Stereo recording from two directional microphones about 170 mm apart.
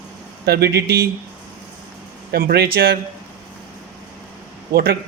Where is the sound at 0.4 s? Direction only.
70° right (ahead or behind).